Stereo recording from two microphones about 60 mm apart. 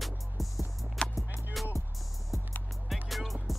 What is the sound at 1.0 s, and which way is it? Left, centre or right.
Music, centre.